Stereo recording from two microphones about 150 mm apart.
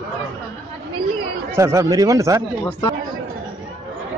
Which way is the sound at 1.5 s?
20° right (ahead or behind).